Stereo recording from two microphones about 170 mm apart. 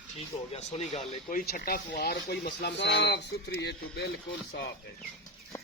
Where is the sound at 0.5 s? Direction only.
40° left (ahead or behind).